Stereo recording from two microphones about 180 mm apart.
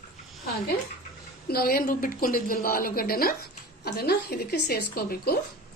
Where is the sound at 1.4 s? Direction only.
60° left (ahead or behind).